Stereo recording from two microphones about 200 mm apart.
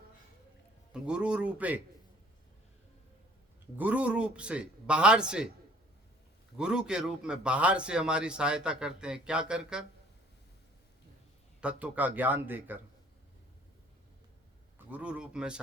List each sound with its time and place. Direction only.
0.9 s speech: 5° right (ahead or behind)
3.8 s speech: 5° right (ahead or behind)
6.6 s speech: 5° right (ahead or behind)
11.6 s speech: 5° right (ahead or behind)
14.8 s speech: 5° right (ahead or behind)